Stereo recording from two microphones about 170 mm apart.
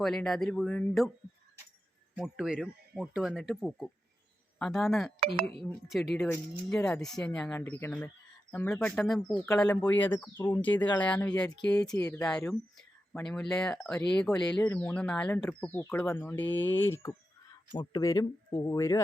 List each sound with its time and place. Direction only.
0.0 s speech: 5° left (ahead or behind)
2.1 s speech: 5° right (ahead or behind)
11.8 s speech: 20° left (ahead or behind)
12.2 s speech: 5° left (ahead or behind)